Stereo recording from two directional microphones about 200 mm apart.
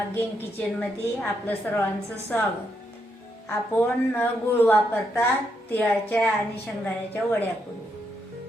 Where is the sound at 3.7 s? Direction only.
10° left (ahead or behind).